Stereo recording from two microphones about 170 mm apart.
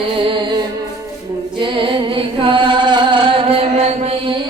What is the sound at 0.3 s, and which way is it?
Music, 30° right (ahead or behind).